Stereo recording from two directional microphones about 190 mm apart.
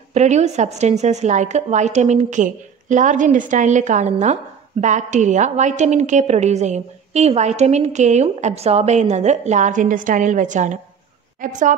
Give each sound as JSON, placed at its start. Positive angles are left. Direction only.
{"t": 0.1, "sound": "a woman's voice", "side_deg": -35}